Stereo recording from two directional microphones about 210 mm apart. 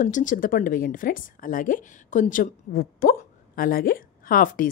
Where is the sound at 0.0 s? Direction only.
35° left (ahead or behind).